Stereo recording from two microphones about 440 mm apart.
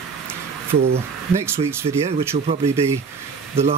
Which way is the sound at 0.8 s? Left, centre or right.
Right.